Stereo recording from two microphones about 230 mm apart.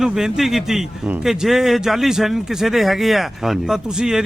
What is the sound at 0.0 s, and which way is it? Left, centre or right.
A man's voice, centre.